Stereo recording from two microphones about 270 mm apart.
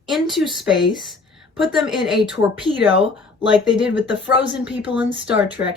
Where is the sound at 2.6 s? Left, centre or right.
Centre.